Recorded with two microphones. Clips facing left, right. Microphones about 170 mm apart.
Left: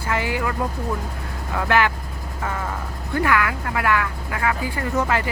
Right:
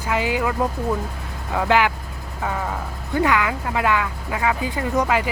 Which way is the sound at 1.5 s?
15° right (ahead or behind).